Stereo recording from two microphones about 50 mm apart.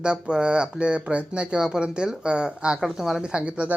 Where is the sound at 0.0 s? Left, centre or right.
Centre.